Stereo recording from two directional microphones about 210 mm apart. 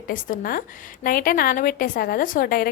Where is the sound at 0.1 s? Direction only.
40° left (ahead or behind).